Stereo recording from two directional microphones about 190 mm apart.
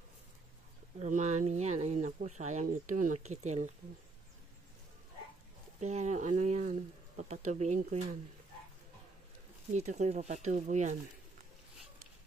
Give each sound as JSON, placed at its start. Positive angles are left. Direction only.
{"t": 0.9, "sound": "speech", "side_deg": -40}
{"t": 5.8, "sound": "speech", "side_deg": -35}
{"t": 9.8, "sound": "speech", "side_deg": -35}